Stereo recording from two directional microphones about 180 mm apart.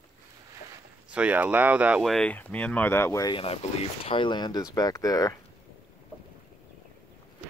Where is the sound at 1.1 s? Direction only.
5° right (ahead or behind); by 3.4 s 20° left (ahead or behind).